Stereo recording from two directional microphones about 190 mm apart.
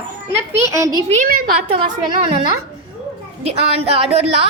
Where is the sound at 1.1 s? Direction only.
45° right (ahead or behind).